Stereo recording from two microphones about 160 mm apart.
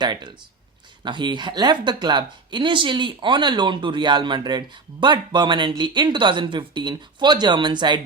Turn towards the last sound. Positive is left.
turn(degrees=-30)  # may be behind; listen again after turning